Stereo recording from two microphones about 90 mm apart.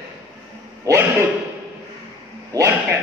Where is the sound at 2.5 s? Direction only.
40° right (ahead or behind).